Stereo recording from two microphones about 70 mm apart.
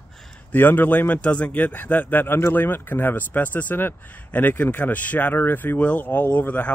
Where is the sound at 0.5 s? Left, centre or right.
Left.